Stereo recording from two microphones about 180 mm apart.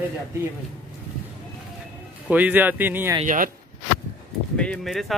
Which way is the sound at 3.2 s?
50° right (ahead or behind).